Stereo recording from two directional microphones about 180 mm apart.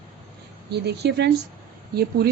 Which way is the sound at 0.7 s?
65° right (ahead or behind).